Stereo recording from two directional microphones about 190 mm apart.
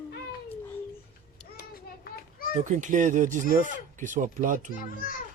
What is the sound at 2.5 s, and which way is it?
Speech, 40° right (ahead or behind).